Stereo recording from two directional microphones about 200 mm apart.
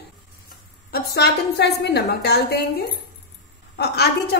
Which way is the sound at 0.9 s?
55° left (ahead or behind).